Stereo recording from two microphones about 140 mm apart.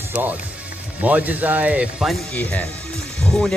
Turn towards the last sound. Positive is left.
turn(degrees=5)  # may be behind; listen again after turning